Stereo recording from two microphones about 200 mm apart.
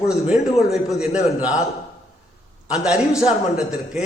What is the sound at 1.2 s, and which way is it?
Speech, 35° left (ahead or behind).